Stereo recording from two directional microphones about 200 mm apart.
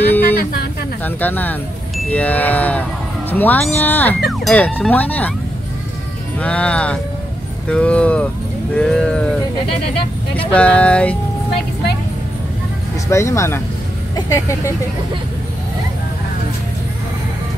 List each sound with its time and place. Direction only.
0.2 s a sound: 50° left (ahead or behind)
1.0 s speech: 10° left (ahead or behind)
6.4 s speech: 5° left (ahead or behind)
10.5 s speech: 5° left (ahead or behind)
13.1 s speech: 15° left (ahead or behind)